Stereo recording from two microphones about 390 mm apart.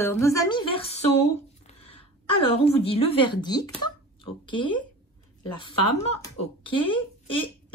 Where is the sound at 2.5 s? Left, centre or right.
Centre.